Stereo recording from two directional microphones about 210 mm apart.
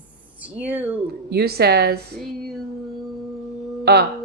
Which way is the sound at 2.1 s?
Centre (ahead or behind).